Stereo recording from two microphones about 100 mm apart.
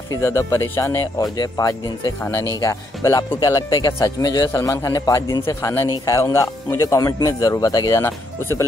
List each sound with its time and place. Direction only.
0.1 s a man's voice: 30° left (ahead or behind)
2.6 s a man's voice: 30° left (ahead or behind)
4.5 s a man's voice: 30° left (ahead or behind)
8.0 s speech: 25° left (ahead or behind)